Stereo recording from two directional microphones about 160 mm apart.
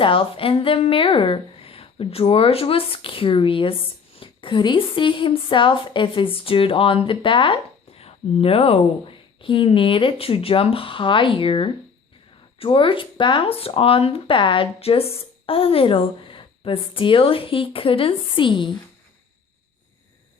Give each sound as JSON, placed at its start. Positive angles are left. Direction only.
{"t": 0.0, "sound": "a woman's voice", "side_deg": 35}